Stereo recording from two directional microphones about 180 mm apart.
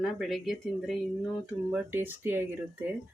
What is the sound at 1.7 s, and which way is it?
Speech, 10° right (ahead or behind).